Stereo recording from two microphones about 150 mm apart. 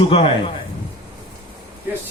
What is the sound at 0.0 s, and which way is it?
Speech, 35° left (ahead or behind).